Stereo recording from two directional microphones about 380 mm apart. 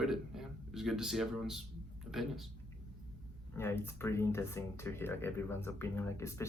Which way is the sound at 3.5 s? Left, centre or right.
Centre.